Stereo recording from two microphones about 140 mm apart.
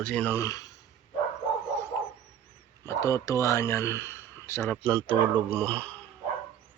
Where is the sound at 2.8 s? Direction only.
20° left (ahead or behind).